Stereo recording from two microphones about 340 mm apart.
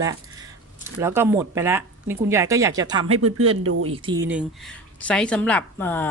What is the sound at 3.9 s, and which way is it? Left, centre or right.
Speech, centre.